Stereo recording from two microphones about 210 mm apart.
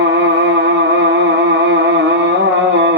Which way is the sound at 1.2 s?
60° right (ahead or behind).